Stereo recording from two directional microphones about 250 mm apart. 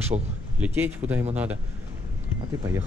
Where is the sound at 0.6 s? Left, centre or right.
Centre.